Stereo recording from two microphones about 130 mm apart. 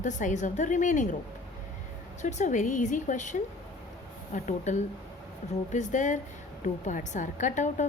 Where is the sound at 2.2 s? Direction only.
70° left (ahead or behind).